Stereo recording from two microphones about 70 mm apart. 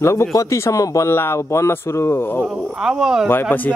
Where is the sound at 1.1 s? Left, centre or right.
Left.